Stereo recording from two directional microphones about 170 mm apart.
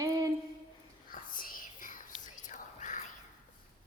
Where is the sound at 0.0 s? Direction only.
20° right (ahead or behind).